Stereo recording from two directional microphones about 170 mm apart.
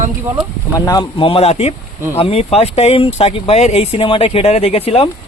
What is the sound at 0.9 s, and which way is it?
Speech, 25° left (ahead or behind).